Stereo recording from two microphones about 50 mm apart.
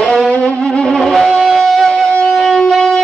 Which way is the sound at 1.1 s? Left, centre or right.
Centre.